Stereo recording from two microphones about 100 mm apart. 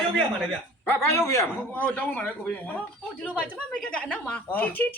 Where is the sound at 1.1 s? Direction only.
30° left (ahead or behind).